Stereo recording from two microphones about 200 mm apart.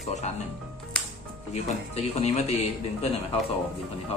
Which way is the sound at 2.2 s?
30° left (ahead or behind).